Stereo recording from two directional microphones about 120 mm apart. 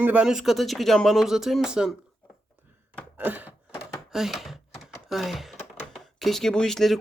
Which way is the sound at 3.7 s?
Centre (ahead or behind).